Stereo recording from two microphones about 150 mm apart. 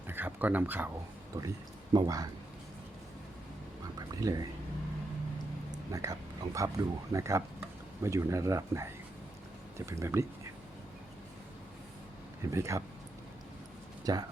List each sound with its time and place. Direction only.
0.1 s a sound: 15° right (ahead or behind)
1.9 s speech: 25° right (ahead or behind)
4.1 s speech: 25° right (ahead or behind)
5.9 s speech: 20° right (ahead or behind)
12.5 s speech: 20° right (ahead or behind)
14.0 s speech: 25° right (ahead or behind)